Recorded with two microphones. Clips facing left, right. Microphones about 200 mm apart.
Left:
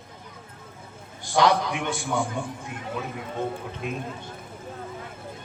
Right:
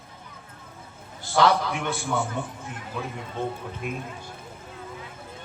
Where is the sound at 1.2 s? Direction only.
15° left (ahead or behind).